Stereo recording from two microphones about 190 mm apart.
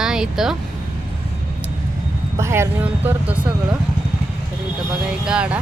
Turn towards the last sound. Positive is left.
turn(degrees=-5)  # may be behind; listen again after turning